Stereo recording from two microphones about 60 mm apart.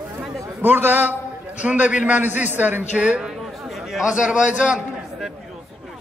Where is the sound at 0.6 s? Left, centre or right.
Right.